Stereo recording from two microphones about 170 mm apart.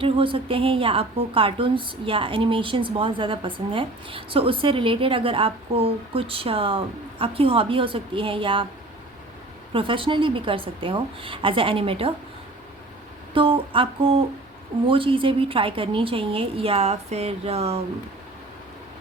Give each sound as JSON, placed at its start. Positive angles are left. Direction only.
{"t": 0.0, "sound": "a woman's voice", "side_deg": -30}
{"t": 9.7, "sound": "a woman's voice", "side_deg": -30}
{"t": 13.3, "sound": "a woman's voice", "side_deg": -30}